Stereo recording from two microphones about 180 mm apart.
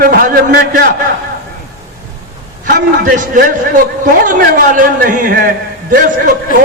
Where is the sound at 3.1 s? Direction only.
50° right (ahead or behind).